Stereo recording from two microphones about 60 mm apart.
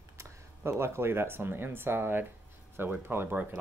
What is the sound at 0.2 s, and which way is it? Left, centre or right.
Speech, right.